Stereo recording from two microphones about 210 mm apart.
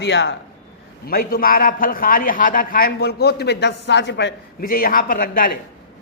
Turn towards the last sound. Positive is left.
turn(degrees=45)  # may be behind; listen again after turning